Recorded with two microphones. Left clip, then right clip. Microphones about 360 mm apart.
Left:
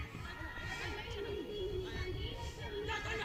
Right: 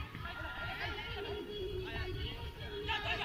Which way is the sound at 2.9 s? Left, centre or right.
Centre.